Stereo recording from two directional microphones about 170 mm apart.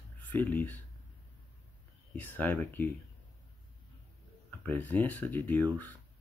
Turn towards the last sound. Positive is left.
turn(degrees=10)  # may be behind; listen again after turning